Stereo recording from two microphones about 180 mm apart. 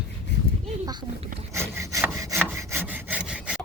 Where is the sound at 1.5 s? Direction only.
15° right (ahead or behind).